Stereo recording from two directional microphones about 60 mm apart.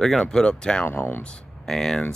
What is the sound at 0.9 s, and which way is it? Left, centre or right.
Speech, left.